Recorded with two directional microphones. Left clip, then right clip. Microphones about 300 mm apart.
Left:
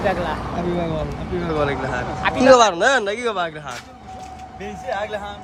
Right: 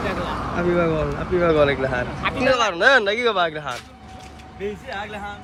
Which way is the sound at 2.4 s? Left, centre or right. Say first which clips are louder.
Left 7 dB; centre.